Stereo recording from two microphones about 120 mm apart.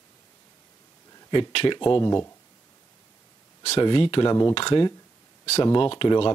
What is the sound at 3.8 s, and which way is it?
Speech, 45° left (ahead or behind).